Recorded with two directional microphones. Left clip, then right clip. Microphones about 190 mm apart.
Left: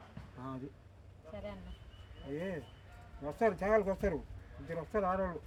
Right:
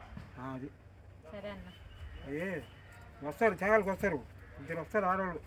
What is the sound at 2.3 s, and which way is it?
Speech, 10° left (ahead or behind).